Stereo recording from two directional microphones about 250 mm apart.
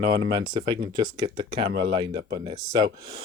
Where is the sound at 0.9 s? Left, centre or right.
Centre.